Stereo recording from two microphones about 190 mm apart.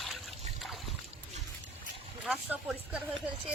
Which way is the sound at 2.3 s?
5° right (ahead or behind).